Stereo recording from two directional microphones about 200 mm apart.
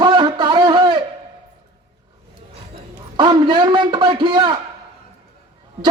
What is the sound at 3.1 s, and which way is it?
A man's voice, 25° right (ahead or behind).